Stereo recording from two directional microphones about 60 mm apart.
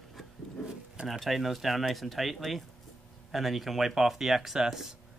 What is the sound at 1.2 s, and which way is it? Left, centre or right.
Speech, centre.